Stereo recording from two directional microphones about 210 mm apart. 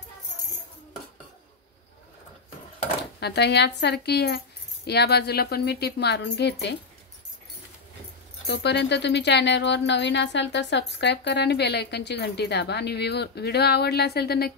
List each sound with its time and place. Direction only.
3.2 s speech: 50° left (ahead or behind)
8.5 s speech: 55° left (ahead or behind)